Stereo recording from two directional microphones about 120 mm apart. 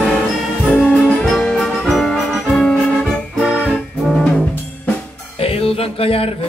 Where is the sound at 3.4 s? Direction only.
10° right (ahead or behind).